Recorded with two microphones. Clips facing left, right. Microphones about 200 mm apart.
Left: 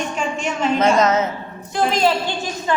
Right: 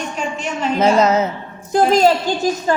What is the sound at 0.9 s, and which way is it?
A woman's voice, 30° right (ahead or behind).